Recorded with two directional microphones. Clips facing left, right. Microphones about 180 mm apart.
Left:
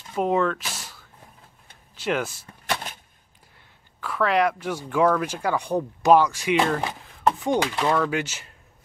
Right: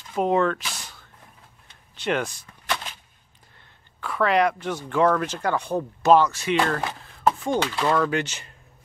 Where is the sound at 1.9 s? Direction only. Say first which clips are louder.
Even; 5° left (ahead or behind).